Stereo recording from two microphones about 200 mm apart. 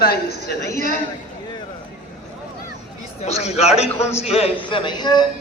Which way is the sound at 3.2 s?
35° left (ahead or behind).